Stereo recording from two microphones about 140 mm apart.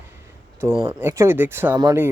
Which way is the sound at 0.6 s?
15° right (ahead or behind).